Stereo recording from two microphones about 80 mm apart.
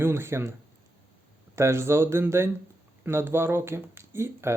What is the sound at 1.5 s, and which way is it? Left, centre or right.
Speech, right.